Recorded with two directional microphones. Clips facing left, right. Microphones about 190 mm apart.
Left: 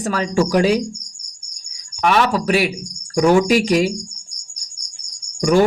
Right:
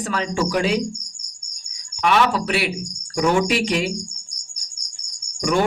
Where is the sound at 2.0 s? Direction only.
40° left (ahead or behind).